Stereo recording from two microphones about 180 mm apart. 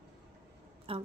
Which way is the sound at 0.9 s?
30° right (ahead or behind).